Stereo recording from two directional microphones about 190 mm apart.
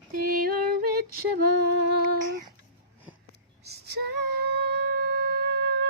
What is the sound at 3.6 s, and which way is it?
Female singing, 60° right (ahead or behind).